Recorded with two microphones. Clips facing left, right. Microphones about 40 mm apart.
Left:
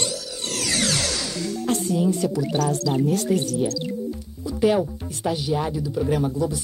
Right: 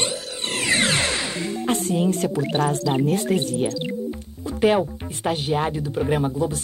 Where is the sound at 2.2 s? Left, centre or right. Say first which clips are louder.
Right 1 dB; right.